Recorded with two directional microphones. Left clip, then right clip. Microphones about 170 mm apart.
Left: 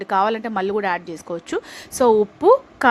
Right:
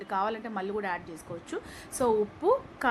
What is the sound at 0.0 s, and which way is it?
A woman's voice, 55° left (ahead or behind).